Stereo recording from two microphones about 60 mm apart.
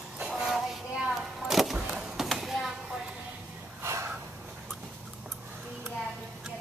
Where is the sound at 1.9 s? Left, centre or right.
Centre.